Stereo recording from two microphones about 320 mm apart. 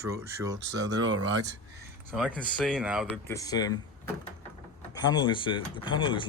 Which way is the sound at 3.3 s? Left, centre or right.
Centre.